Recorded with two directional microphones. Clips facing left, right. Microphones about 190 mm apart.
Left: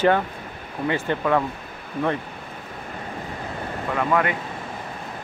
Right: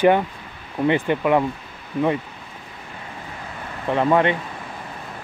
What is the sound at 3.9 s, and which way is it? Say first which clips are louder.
Speech: right 5 dB; 25° right (ahead or behind).